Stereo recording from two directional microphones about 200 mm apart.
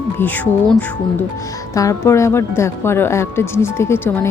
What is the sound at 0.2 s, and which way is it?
A woman's voice, 10° left (ahead or behind).